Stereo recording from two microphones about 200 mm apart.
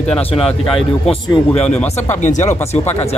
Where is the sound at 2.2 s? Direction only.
35° left (ahead or behind).